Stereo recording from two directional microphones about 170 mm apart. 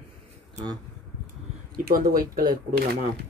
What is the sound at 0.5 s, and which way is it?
Speech, 25° right (ahead or behind).